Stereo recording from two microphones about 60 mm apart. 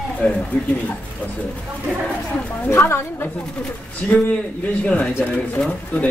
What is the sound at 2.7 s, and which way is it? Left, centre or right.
Speech, left.